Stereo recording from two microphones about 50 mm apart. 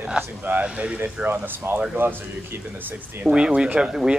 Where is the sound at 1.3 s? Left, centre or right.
Right.